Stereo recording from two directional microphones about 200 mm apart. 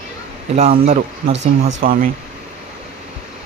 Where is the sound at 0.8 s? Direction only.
35° right (ahead or behind).